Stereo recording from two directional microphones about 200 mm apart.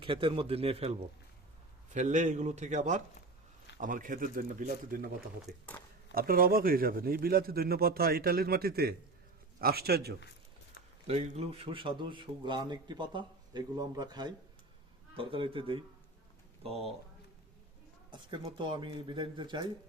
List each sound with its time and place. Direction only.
0.0 s a man's voice: 25° right (ahead or behind); by 5.0 s 40° right (ahead or behind)
5.5 s speech: 10° left (ahead or behind)
6.1 s speech: 45° right (ahead or behind)
11.0 s a man's voice: 30° right (ahead or behind)
18.1 s a man's voice: 25° right (ahead or behind)